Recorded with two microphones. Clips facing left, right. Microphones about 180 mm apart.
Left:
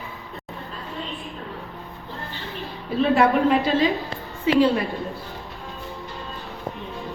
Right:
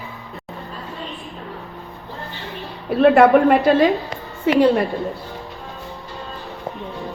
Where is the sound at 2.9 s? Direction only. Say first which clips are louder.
Right 7 dB; 60° right (ahead or behind).